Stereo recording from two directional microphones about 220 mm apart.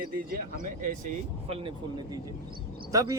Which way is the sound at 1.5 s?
25° right (ahead or behind).